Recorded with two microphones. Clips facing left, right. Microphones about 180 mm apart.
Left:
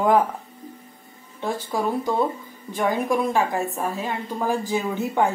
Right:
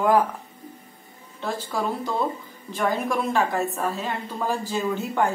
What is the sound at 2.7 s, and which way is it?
A woman's voice, 15° left (ahead or behind).